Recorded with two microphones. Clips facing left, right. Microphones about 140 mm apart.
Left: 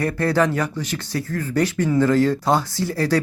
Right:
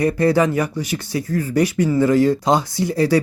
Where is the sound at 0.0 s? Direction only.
15° right (ahead or behind).